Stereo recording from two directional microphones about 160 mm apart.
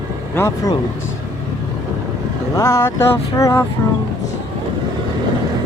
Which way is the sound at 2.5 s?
15° left (ahead or behind).